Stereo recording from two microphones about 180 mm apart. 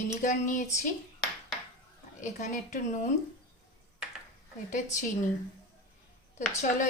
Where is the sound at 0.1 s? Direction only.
45° left (ahead or behind).